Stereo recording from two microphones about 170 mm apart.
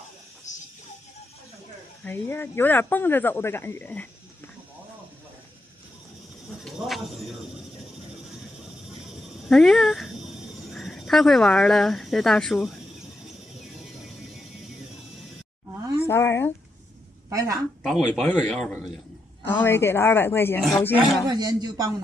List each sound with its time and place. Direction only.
0.5 s music: 45° left (ahead or behind)
2.0 s speech: 10° left (ahead or behind)
9.5 s a man's voice: 5° left (ahead or behind)
16.1 s speech: 15° left (ahead or behind)
17.3 s a woman's voice: 20° right (ahead or behind)
17.8 s a man's voice: centre (ahead or behind)
21.3 s speech: 25° right (ahead or behind)